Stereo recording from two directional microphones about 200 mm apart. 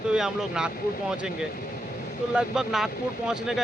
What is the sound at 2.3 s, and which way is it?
Speech, 5° right (ahead or behind).